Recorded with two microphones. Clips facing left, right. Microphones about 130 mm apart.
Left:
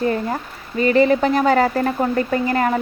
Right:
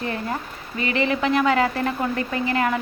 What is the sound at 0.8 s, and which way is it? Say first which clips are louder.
A woman's voice: left 8 dB; 40° left (ahead or behind).